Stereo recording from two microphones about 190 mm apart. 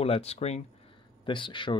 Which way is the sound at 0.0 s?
30° left (ahead or behind).